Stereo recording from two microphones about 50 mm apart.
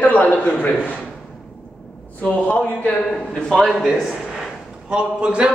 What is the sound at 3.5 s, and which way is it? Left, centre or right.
Speech, centre.